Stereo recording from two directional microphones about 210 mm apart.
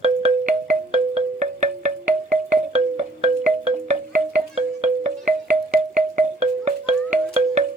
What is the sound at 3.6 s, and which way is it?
Music, 35° right (ahead or behind).